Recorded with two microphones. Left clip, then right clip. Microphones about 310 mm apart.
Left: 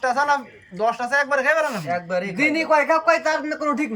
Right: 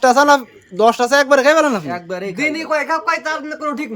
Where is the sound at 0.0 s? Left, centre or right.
Right.